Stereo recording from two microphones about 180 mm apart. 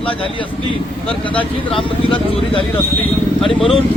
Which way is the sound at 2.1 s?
30° left (ahead or behind).